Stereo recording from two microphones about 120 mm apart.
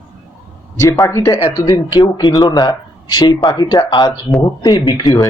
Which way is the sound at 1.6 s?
35° left (ahead or behind).